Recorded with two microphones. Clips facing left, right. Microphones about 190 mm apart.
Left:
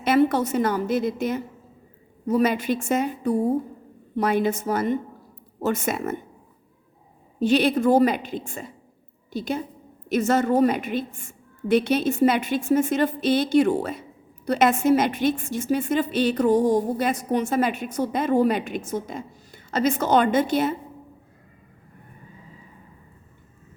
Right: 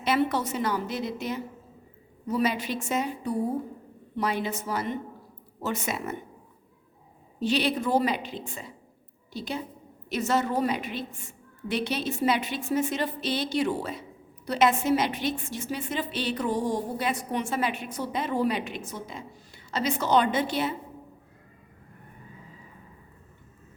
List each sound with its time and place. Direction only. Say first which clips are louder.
0.0 s a woman's voice: left 6 dB; 50° left (ahead or behind)
7.3 s a woman's voice: left 6 dB; 50° left (ahead or behind)